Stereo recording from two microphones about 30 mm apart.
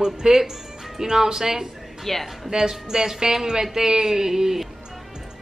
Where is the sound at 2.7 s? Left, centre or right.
Centre.